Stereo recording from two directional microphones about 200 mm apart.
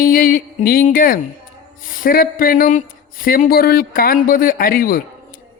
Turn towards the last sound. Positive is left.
turn(degrees=45)  # may be behind; listen again after turning